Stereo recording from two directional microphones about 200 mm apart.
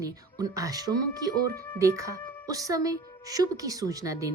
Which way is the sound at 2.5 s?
15° right (ahead or behind).